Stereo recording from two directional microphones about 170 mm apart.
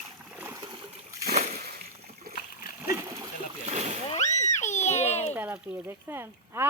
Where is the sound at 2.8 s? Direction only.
20° right (ahead or behind).